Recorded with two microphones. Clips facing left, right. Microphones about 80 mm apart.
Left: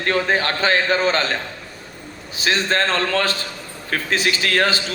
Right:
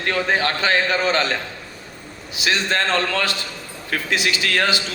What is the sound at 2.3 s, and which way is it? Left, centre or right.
A man's voice, left.